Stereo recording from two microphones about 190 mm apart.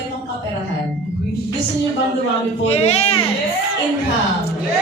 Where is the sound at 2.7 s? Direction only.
35° left (ahead or behind).